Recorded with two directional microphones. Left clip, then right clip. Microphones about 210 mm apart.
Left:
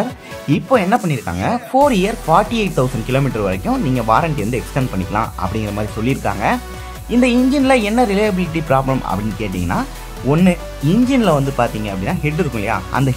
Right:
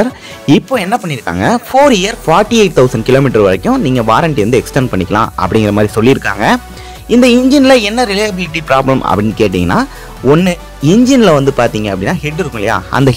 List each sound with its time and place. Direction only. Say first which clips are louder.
0.7 s speech: right 2 dB; 35° right (ahead or behind)